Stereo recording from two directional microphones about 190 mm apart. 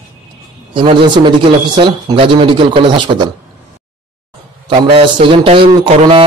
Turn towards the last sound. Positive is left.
turn(degrees=-30)  # may be behind; listen again after turning